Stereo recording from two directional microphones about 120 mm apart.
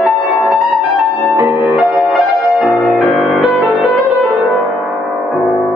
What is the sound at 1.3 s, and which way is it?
Music, 15° right (ahead or behind).